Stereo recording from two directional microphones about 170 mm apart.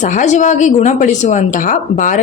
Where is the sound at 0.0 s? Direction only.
45° left (ahead or behind).